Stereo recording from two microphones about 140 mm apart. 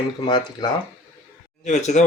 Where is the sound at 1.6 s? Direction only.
55° left (ahead or behind).